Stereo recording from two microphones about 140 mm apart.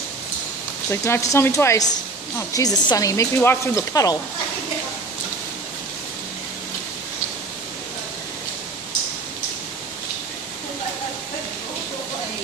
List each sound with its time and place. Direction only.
0.8 s speech: 20° left (ahead or behind)